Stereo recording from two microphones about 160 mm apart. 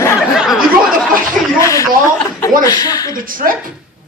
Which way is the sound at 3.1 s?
60° right (ahead or behind).